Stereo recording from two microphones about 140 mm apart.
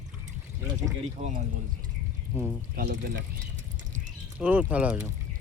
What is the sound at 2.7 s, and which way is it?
Speech, 90° right.